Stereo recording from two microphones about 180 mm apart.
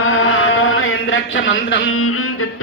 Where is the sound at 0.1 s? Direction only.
90° left.